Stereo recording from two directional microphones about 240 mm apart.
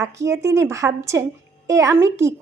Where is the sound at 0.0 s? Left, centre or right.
Centre.